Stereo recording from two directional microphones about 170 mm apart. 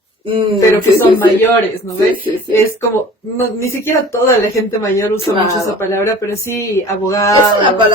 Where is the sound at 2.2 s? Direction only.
15° left (ahead or behind).